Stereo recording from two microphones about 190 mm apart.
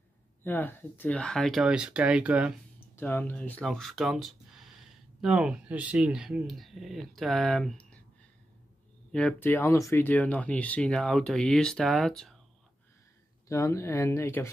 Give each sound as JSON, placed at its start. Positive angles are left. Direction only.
{"t": 0.4, "sound": "speech", "side_deg": 10}
{"t": 3.0, "sound": "speech", "side_deg": 10}
{"t": 9.1, "sound": "speech", "side_deg": 5}
{"t": 13.5, "sound": "speech", "side_deg": 15}